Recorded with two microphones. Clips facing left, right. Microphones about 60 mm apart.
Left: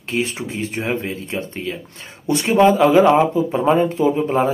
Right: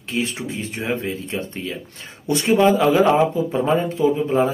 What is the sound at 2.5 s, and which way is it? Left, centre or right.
Speech, centre.